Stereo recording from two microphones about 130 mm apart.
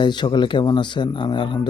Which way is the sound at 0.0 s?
35° left (ahead or behind).